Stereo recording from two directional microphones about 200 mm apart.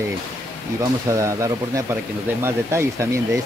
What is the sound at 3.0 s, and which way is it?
Speech, 15° right (ahead or behind).